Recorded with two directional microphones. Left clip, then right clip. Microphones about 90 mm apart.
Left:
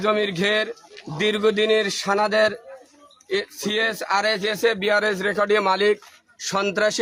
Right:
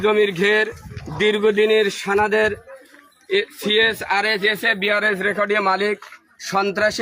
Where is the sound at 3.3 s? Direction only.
40° left (ahead or behind).